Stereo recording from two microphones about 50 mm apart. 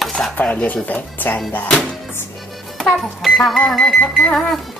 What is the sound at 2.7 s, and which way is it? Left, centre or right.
Speech, centre.